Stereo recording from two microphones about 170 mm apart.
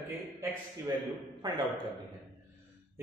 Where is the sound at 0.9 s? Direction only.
20° right (ahead or behind).